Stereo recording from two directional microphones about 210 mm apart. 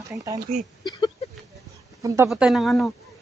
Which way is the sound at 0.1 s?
15° right (ahead or behind).